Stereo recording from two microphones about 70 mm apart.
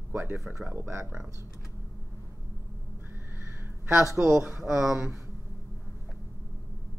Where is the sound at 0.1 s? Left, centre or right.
Right.